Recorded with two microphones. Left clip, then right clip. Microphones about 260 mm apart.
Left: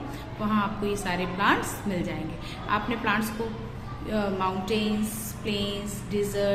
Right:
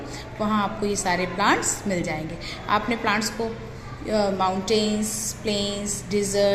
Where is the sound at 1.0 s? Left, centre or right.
Centre.